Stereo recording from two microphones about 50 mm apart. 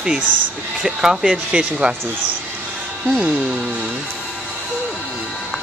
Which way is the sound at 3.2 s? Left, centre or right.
Right.